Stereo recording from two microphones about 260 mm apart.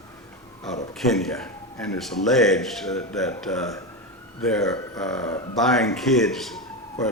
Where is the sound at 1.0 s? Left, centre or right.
Centre.